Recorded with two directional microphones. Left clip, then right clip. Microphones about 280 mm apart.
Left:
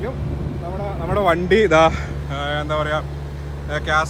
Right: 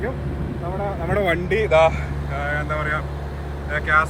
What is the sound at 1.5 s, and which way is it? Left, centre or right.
Speech, left.